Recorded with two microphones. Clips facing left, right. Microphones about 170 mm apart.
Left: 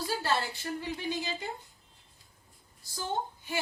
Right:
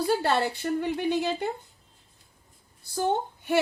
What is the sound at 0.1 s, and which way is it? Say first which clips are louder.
A woman's voice: right 6 dB; 60° right (ahead or behind).